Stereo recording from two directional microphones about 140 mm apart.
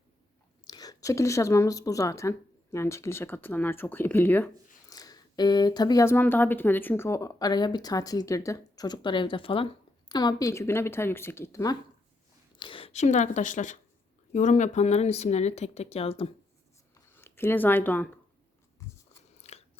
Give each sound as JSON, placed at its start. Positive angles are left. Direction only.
{"t": 0.7, "sound": "speech", "side_deg": 25}
{"t": 4.9, "sound": "speech", "side_deg": 25}
{"t": 6.1, "sound": "speech", "side_deg": 15}
{"t": 10.1, "sound": "speech", "side_deg": 30}
{"t": 12.5, "sound": "a sound", "side_deg": 35}
{"t": 12.9, "sound": "speech", "side_deg": 55}
{"t": 16.9, "sound": "a sound", "side_deg": 15}
{"t": 19.4, "sound": "crunch", "side_deg": 50}